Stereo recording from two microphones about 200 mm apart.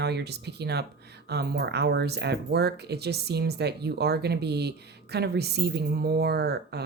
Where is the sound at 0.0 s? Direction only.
55° right (ahead or behind).